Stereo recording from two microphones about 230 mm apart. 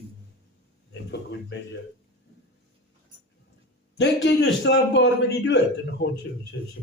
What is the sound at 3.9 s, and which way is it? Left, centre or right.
A man's voice, left.